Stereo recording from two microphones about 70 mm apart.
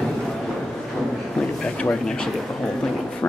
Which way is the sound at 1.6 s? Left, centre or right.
Centre.